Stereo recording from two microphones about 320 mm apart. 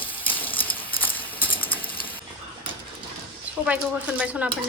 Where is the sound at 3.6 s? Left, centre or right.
Centre.